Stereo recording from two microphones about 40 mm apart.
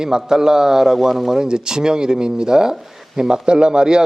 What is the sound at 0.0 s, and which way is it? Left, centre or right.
A man's voice, centre.